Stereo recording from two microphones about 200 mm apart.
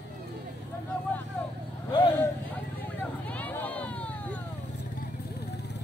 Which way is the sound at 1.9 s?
20° left (ahead or behind).